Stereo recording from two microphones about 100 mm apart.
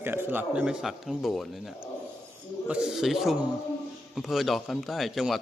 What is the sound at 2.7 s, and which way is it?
A man's voice, 10° right (ahead or behind).